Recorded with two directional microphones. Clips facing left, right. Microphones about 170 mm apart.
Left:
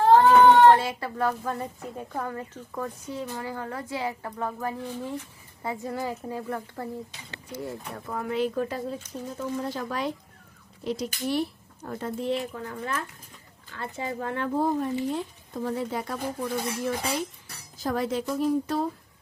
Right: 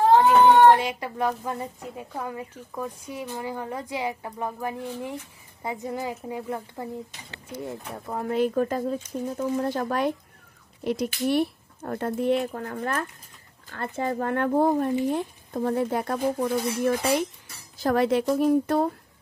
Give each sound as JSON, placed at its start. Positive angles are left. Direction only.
{"t": 0.6, "sound": "a woman's voice", "side_deg": -15}
{"t": 8.3, "sound": "speech", "side_deg": -45}
{"t": 18.4, "sound": "speech", "side_deg": -55}